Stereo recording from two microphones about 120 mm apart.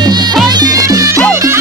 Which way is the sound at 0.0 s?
35° right (ahead or behind).